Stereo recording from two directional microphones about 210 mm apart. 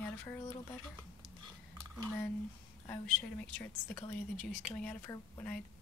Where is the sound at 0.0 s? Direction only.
10° left (ahead or behind).